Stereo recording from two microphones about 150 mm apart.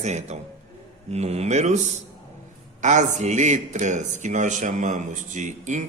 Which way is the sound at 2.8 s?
55° right (ahead or behind).